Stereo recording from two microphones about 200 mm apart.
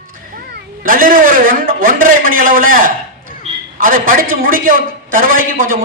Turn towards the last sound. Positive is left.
turn(degrees=-45)  # may be behind; listen again after turning